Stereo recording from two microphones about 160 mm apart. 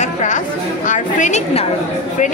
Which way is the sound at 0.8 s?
45° left (ahead or behind).